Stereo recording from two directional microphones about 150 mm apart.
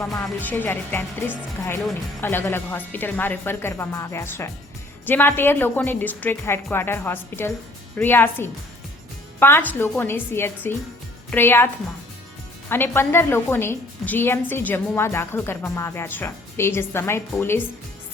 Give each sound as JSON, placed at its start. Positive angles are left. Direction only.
{"t": 0.1, "sound": "a woman's voice", "side_deg": 15}
{"t": 2.2, "sound": "a woman's voice", "side_deg": 15}